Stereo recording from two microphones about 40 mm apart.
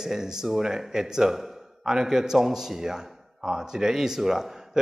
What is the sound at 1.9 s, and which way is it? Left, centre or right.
A man's voice, centre.